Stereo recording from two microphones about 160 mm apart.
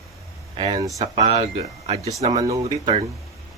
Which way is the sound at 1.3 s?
40° right (ahead or behind).